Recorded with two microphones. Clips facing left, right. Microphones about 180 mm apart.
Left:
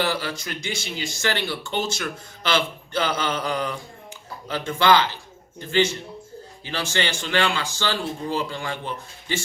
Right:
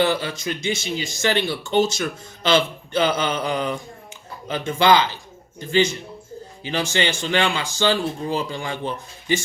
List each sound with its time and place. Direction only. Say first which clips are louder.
0.0 s speech: right 5 dB; 20° right (ahead or behind)